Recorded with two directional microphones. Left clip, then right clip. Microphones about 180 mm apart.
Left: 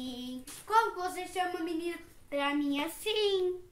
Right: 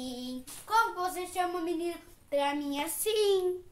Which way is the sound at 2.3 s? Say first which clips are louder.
Right 1 dB; 20° right (ahead or behind).